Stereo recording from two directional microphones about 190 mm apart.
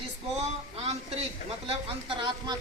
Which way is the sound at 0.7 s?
35° right (ahead or behind).